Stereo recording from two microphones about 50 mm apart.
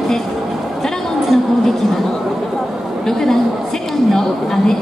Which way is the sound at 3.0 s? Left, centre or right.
Centre.